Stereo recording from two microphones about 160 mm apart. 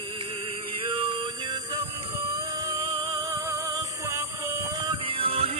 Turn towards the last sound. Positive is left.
turn(degrees=-35)  # may be behind; listen again after turning